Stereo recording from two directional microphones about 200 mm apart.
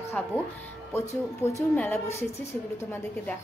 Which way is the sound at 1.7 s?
5° left (ahead or behind).